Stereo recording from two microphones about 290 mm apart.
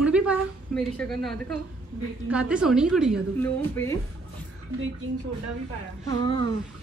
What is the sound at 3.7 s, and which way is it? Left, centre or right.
Speech, centre.